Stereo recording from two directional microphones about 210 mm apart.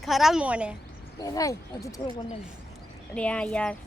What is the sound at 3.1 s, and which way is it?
Speech, 5° left (ahead or behind).